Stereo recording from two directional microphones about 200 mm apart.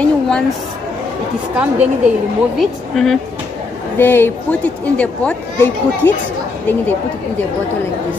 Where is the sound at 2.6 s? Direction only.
Centre (ahead or behind).